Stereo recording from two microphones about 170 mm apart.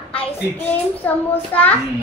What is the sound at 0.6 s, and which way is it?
A child's voice, 10° left (ahead or behind).